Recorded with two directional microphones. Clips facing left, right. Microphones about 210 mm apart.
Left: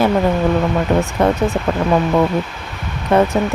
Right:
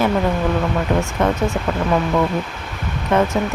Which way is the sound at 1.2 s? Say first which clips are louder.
Left 3 dB; 35° left (ahead or behind).